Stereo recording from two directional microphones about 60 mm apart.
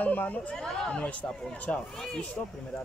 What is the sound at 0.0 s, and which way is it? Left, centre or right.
Speech, left.